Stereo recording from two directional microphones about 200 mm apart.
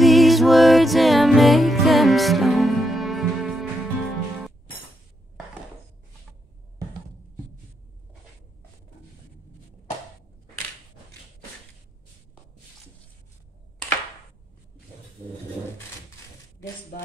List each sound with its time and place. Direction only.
0.0 s music: centre (ahead or behind)